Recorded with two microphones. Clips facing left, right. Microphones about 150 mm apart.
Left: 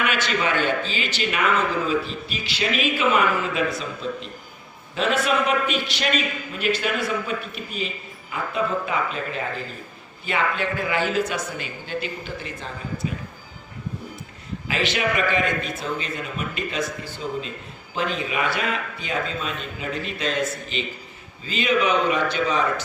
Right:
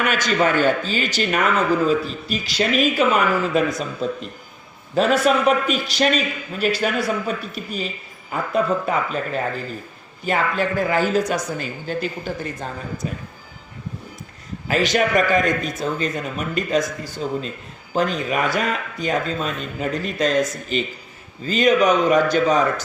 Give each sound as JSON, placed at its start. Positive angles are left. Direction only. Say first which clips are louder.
{"t": 0.0, "sound": "a man's voice", "louder": "right 4 dB", "side_deg": -40}
{"t": 14.7, "sound": "a man's voice", "louder": "right 6 dB", "side_deg": -40}